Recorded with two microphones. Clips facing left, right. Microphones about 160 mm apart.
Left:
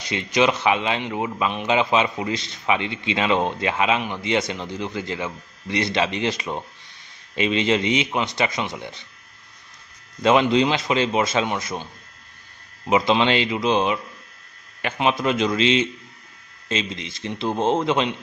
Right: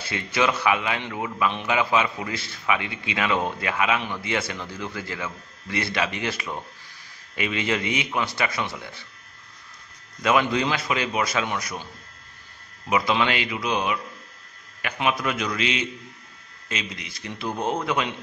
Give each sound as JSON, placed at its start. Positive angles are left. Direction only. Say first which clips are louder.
{"t": 0.0, "sound": "a man's voice", "louder": "left 4 dB", "side_deg": 20}
{"t": 10.2, "sound": "a man's voice", "louder": "left 5 dB", "side_deg": 25}
{"t": 12.9, "sound": "a man's voice", "louder": "left 4 dB", "side_deg": 25}